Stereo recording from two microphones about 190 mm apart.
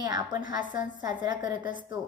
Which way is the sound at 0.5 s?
45° left (ahead or behind).